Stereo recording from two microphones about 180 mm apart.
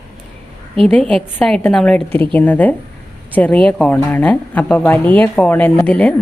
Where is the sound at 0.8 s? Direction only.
5° left (ahead or behind).